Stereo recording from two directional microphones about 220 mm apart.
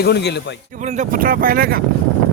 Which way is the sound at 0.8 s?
35° right (ahead or behind).